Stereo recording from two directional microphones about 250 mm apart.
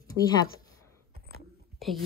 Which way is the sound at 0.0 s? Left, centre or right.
Centre.